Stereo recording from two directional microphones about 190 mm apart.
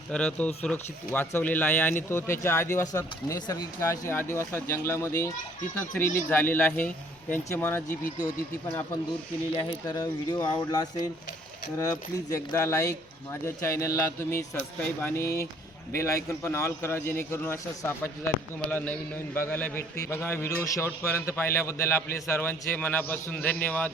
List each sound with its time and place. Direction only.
0.1 s a man's voice: 5° left (ahead or behind)
9.6 s a man's voice: 20° left (ahead or behind)